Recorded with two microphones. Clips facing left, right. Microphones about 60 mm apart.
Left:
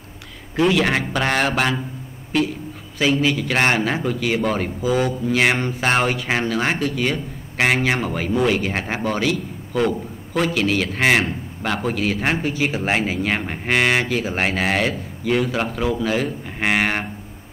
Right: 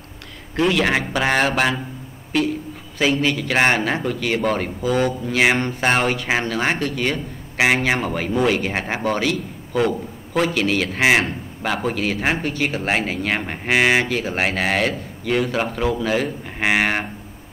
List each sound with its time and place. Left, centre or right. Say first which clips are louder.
0.6 s a man's voice: left 1 dB; centre